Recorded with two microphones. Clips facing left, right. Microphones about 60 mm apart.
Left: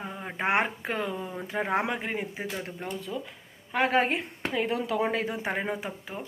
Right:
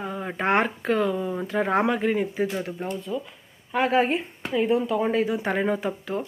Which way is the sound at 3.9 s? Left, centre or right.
Left.